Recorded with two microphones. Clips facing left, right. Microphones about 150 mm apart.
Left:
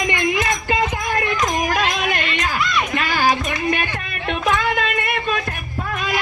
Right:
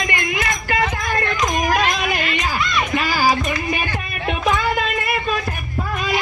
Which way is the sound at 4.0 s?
5° right (ahead or behind).